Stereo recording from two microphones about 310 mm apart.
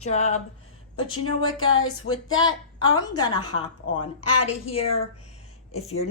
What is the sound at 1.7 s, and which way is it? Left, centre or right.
A woman's voice, left.